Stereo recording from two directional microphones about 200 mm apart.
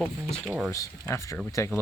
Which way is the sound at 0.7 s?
15° left (ahead or behind).